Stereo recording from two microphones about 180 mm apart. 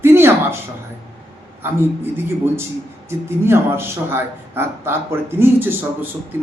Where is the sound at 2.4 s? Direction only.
15° right (ahead or behind).